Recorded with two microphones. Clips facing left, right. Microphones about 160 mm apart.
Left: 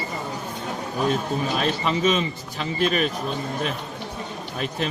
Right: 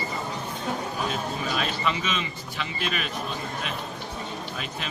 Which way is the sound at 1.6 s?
40° left (ahead or behind).